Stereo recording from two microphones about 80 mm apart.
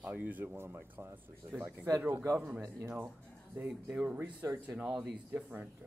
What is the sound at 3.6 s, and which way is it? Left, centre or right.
Speech, centre.